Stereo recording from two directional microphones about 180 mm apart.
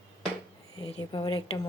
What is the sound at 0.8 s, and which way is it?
Speech, 30° left (ahead or behind).